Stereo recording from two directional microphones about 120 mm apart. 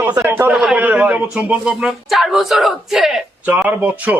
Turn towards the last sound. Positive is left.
turn(degrees=-10)  # may be behind; listen again after turning